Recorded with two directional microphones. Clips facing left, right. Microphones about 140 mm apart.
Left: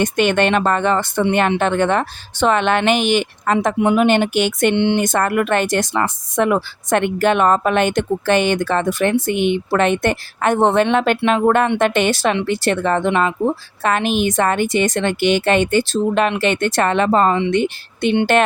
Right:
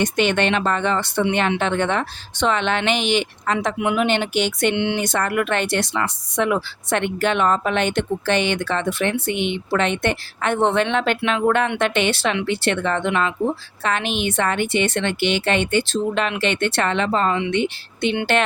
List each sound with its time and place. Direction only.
0.0 s speech: 50° left (ahead or behind)